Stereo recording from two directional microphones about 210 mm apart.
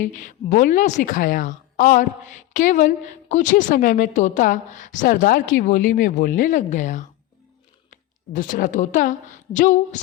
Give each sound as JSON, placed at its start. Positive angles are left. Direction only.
{"t": 0.0, "sound": "a woman's voice", "side_deg": 35}